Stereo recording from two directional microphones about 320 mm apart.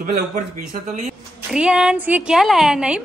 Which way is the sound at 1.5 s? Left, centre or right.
Centre.